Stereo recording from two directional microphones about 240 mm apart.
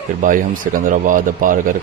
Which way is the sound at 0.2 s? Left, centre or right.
Right.